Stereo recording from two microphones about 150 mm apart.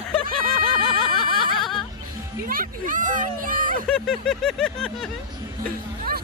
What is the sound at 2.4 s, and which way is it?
Speech, 70° right (ahead or behind).